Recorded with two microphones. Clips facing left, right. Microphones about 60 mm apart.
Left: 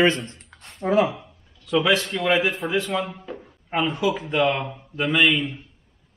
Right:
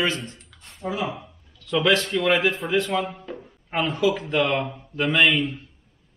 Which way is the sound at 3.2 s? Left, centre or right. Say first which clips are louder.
Even; centre.